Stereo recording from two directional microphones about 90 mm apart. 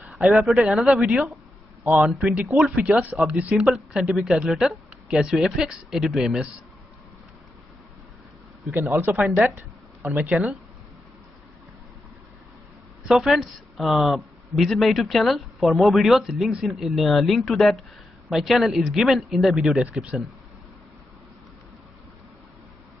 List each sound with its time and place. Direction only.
0.1 s a man's voice: centre (ahead or behind)
8.7 s speech: 25° right (ahead or behind)
9.2 s speech: 10° right (ahead or behind)
13.1 s a man's voice: centre (ahead or behind)